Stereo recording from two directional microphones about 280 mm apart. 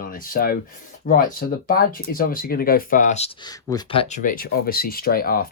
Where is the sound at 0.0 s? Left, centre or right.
Left.